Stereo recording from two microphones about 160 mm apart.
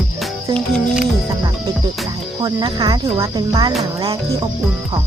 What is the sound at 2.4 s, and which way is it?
Speech, 25° right (ahead or behind).